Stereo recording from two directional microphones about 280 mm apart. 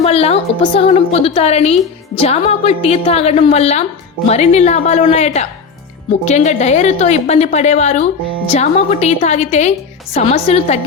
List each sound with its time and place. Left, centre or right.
0.0 s a woman's voice: left